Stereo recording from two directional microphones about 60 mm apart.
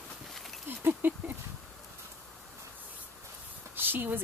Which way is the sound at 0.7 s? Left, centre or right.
Right.